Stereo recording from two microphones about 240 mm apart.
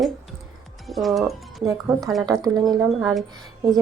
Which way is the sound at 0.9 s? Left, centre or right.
Centre.